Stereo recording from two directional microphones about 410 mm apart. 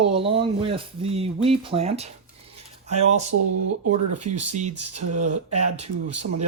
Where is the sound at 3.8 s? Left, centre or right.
Right.